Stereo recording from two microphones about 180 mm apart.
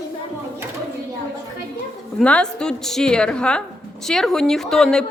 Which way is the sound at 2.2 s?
5° left (ahead or behind).